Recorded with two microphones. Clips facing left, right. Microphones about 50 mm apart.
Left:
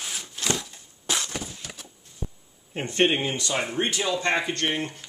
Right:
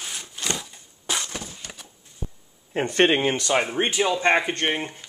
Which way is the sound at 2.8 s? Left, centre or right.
Right.